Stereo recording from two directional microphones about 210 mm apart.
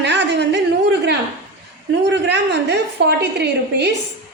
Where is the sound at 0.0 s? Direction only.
55° right (ahead or behind).